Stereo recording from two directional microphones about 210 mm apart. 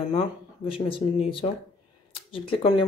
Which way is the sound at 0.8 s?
25° left (ahead or behind).